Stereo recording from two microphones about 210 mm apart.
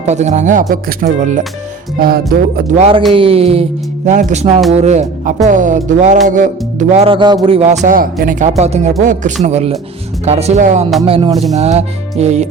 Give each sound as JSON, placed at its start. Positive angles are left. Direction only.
{"t": 0.0, "sound": "speech", "side_deg": -35}
{"t": 2.0, "sound": "music", "side_deg": -45}
{"t": 2.7, "sound": "speech", "side_deg": -30}